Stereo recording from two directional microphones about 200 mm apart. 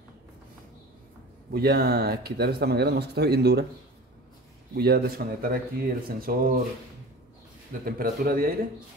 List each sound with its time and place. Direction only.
1.5 s speech: 50° right (ahead or behind)
4.7 s speech: 50° right (ahead or behind)
7.8 s speech: 45° right (ahead or behind)